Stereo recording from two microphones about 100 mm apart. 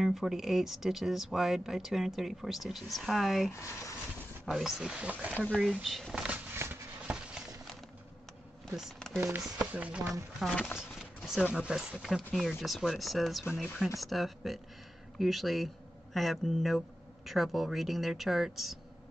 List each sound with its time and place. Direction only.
0.0 s speech: centre (ahead or behind)
3.5 s speech: 30° left (ahead or behind)
4.5 s speech: 5° right (ahead or behind)
5.6 s speech: centre (ahead or behind)
6.2 s a sound: 15° right (ahead or behind)
8.7 s speech: centre (ahead or behind)
9.6 s speech: 15° right (ahead or behind)
10.8 s a sound: 5° right (ahead or behind)
11.5 s speech: 5° right (ahead or behind)